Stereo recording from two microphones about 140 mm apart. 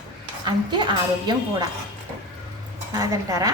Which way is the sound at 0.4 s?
35° right (ahead or behind).